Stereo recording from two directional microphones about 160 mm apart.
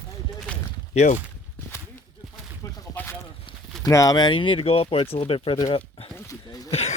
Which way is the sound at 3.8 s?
20° left (ahead or behind).